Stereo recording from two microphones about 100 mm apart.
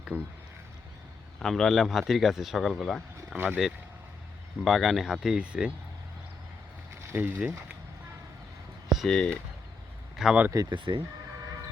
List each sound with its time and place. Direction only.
0.1 s speech: 20° right (ahead or behind)
1.4 s speech: 5° left (ahead or behind)
3.3 s speech: 15° right (ahead or behind)
4.6 s speech: centre (ahead or behind)
7.1 s speech: 20° right (ahead or behind)
9.0 s speech: 5° left (ahead or behind)
10.2 s speech: 5° right (ahead or behind)
10.7 s speech: 55° right (ahead or behind)